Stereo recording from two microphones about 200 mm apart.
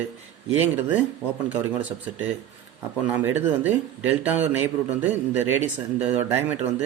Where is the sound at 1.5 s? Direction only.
5° right (ahead or behind).